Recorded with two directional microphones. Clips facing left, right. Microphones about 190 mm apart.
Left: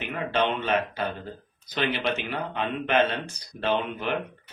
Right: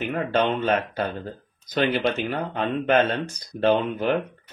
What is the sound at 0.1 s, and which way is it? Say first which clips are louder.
Speech: right 2 dB; 45° right (ahead or behind).